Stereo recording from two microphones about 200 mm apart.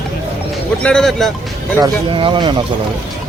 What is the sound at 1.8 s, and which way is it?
Speech, 20° right (ahead or behind).